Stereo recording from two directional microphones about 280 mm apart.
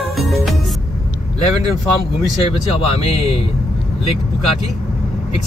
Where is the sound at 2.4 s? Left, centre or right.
Centre.